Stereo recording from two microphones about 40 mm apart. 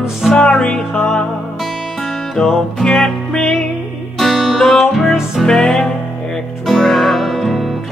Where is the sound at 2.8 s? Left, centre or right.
Centre.